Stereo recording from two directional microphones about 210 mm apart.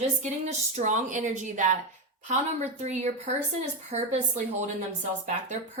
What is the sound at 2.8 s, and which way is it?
A woman's voice, 35° right (ahead or behind).